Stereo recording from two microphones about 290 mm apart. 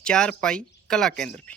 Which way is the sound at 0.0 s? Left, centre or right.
Centre.